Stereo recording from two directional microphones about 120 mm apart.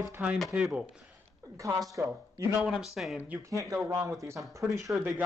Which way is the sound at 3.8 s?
35° right (ahead or behind).